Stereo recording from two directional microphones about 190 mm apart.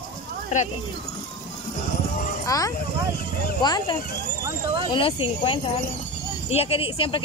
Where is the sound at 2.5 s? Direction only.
15° left (ahead or behind).